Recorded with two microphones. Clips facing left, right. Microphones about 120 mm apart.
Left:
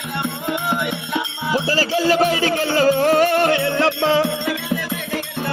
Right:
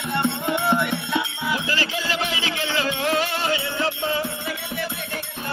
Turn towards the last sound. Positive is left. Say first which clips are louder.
# left 8 dB
turn(degrees=90)